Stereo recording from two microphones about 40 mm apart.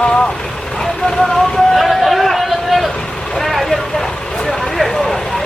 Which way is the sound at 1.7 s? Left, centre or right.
Centre.